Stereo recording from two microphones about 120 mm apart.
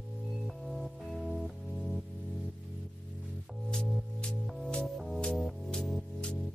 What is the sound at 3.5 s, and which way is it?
Music, 5° left (ahead or behind).